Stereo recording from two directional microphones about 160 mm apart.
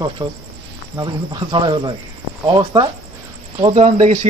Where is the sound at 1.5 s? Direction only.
30° right (ahead or behind).